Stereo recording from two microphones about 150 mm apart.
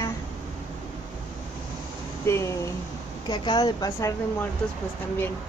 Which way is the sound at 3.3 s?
30° left (ahead or behind).